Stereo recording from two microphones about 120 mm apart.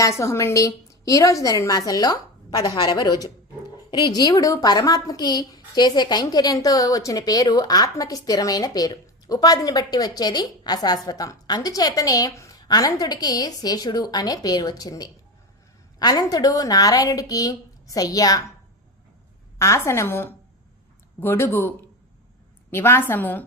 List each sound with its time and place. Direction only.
0.0 s a woman's voice: 25° left (ahead or behind)
19.5 s a woman's voice: 25° left (ahead or behind)